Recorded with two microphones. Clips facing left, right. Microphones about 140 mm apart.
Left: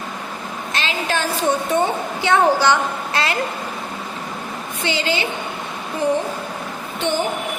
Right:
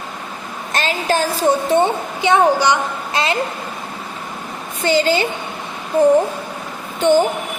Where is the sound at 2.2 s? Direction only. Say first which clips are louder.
Right 2 dB; 15° right (ahead or behind).